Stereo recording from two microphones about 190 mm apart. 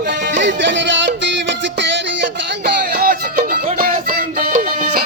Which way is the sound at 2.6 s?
50° right (ahead or behind).